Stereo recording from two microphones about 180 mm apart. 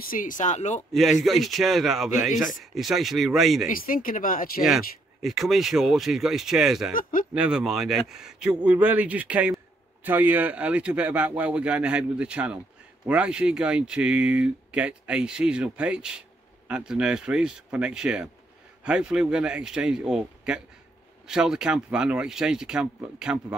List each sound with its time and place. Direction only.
0.0 s speech: 50° left (ahead or behind)
0.9 s speech: centre (ahead or behind)
3.6 s speech: 50° left (ahead or behind)
4.6 s speech: centre (ahead or behind)
6.9 s speech: 50° left (ahead or behind)
7.3 s speech: 5° right (ahead or behind)